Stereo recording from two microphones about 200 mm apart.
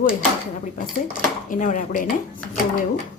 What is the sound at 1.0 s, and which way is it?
Speech, 40° left (ahead or behind).